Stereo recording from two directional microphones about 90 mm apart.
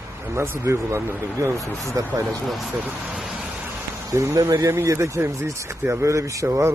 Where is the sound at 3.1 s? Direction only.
5° right (ahead or behind).